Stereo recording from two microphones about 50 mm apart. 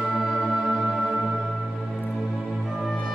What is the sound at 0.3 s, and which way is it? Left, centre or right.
Music, centre.